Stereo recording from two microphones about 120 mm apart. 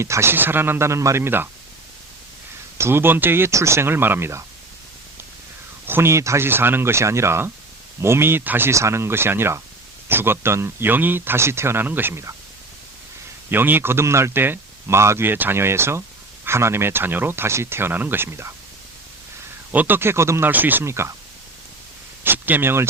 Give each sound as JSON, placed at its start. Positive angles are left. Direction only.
{"t": 0.0, "sound": "speech", "side_deg": -20}
{"t": 2.7, "sound": "speech", "side_deg": -20}
{"t": 5.8, "sound": "speech", "side_deg": -20}
{"t": 13.5, "sound": "speech", "side_deg": -15}
{"t": 19.7, "sound": "speech", "side_deg": -15}
{"t": 22.2, "sound": "speech", "side_deg": -15}